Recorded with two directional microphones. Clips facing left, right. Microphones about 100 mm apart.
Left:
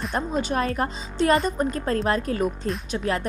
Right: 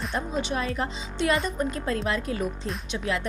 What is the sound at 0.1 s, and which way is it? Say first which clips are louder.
Speech: left 4 dB; 45° left (ahead or behind).